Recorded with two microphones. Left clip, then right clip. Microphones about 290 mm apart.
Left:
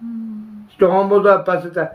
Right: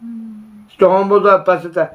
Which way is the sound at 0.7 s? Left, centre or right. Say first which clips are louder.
Right 2 dB; right.